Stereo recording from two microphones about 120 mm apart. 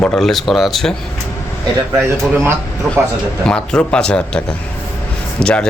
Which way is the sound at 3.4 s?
10° left (ahead or behind).